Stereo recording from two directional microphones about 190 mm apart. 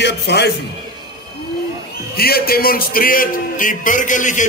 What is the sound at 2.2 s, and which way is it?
A man's voice, 50° left (ahead or behind).